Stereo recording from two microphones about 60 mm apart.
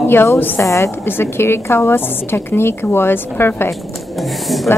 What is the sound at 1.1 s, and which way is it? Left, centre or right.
A woman's voice, left.